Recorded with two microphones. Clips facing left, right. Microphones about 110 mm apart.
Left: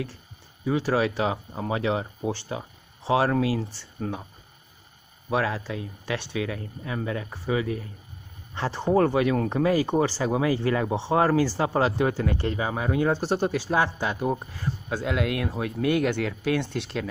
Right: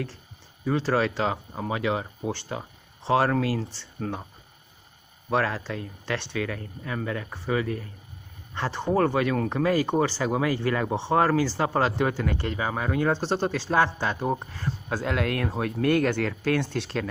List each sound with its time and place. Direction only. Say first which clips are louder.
0.7 s speech: even; 10° left (ahead or behind)
2.2 s speech: left 1 dB; 15° left (ahead or behind)
5.3 s speech: even; 10° left (ahead or behind)
13.2 s speech: left 1 dB; 25° right (ahead or behind)
13.5 s speech: right 1 dB; 10° left (ahead or behind)